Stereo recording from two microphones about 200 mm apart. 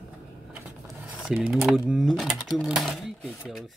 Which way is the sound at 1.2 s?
Centre (ahead or behind).